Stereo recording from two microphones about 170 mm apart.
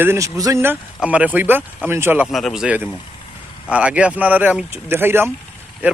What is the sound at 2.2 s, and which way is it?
Speech, centre (ahead or behind).